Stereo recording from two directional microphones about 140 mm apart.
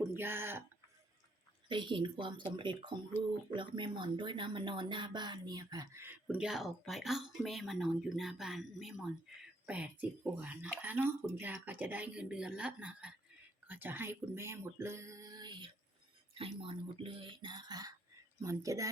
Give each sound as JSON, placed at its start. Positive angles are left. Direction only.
{"t": 0.2, "sound": "speech", "side_deg": -15}
{"t": 1.6, "sound": "speech", "side_deg": -35}
{"t": 6.2, "sound": "speech", "side_deg": -5}